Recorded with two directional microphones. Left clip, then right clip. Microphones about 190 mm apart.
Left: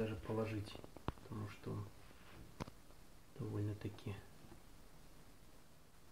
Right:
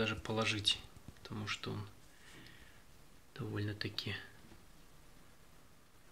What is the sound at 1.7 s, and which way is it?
Speech, 30° right (ahead or behind).